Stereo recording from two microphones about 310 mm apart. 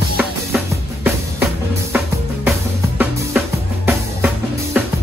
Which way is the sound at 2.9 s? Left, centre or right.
Centre.